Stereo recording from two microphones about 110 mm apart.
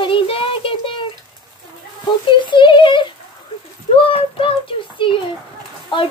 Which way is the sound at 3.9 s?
55° left (ahead or behind).